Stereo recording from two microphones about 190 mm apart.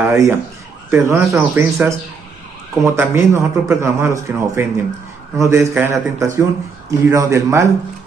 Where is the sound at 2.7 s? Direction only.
15° right (ahead or behind).